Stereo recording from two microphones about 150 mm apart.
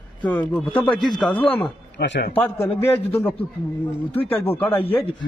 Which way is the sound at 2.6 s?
15° left (ahead or behind).